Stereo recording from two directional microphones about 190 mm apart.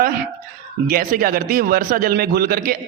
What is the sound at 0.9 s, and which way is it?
A man's voice, 50° right (ahead or behind).